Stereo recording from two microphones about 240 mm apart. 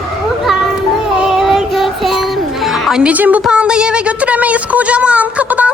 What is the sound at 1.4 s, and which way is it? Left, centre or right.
Music, centre.